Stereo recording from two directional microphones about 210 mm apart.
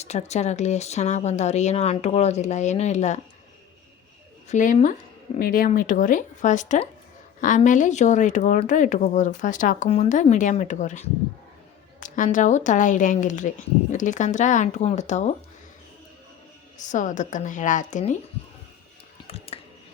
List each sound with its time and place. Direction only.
0.0 s speech: 30° left (ahead or behind)
4.4 s speech: 35° left (ahead or behind)
16.8 s speech: 35° left (ahead or behind)
19.3 s a sound: 30° left (ahead or behind)